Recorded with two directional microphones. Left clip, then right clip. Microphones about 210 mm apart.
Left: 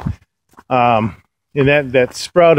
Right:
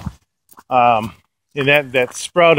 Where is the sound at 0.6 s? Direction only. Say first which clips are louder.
Even; 20° left (ahead or behind).